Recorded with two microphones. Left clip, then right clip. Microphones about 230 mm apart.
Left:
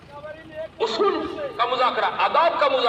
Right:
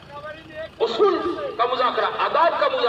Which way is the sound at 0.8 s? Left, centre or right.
Left.